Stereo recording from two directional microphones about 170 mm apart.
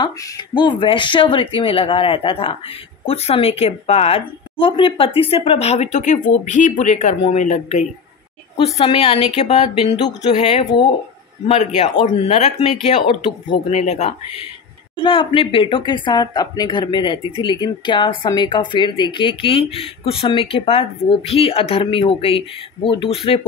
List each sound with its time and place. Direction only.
0.0 s a woman's voice: 25° left (ahead or behind); by 14.1 s 40° left (ahead or behind)
15.0 s a woman's voice: 30° left (ahead or behind)